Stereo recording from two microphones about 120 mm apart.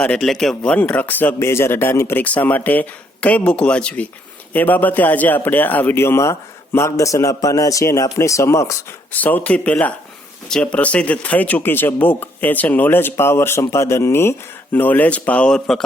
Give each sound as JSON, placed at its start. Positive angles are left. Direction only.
{"t": 0.0, "sound": "a man's voice", "side_deg": 5}
{"t": 9.1, "sound": "speech", "side_deg": 15}